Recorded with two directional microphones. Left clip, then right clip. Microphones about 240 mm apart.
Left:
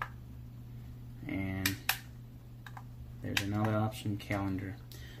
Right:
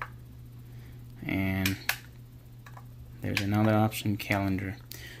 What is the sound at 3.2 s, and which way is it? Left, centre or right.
Speech, right.